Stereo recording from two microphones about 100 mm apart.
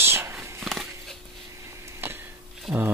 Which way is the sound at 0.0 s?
25° right (ahead or behind).